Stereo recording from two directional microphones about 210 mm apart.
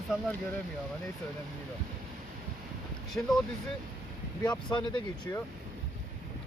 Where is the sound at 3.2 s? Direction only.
10° left (ahead or behind).